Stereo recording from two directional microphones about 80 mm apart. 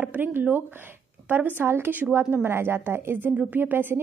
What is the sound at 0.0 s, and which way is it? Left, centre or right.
A woman's voice, right.